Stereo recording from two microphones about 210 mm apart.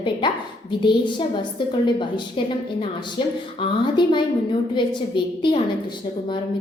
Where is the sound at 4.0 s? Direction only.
20° left (ahead or behind).